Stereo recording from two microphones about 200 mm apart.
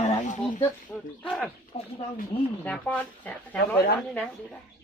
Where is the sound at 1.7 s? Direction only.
30° left (ahead or behind).